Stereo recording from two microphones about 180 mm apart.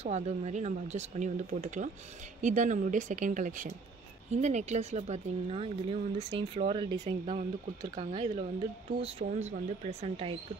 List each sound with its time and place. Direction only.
0.0 s speech: 40° right (ahead or behind)